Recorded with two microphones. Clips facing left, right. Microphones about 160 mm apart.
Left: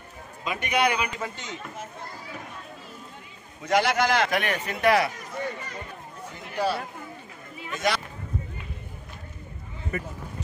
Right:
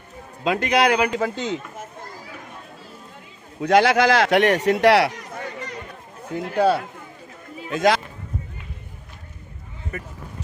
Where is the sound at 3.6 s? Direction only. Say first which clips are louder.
Right 7 dB; 80° right; by 6.8 s 60° right (ahead or behind).